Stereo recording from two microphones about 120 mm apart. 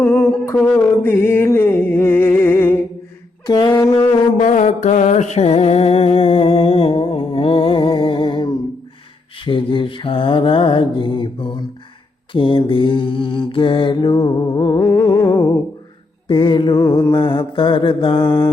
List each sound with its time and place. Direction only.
0.0 s humming: 5° left (ahead or behind)
1.0 s music: 20° left (ahead or behind)
3.4 s a sound: 40° left (ahead or behind)
4.4 s music: 90° left; by 8.4 s 45° left (ahead or behind)
9.4 s mantra: 45° left (ahead or behind)
16.3 s mantra: 40° left (ahead or behind)